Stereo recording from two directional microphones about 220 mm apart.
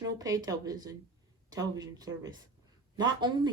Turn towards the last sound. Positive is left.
turn(degrees=-20)  # may be behind; listen again after turning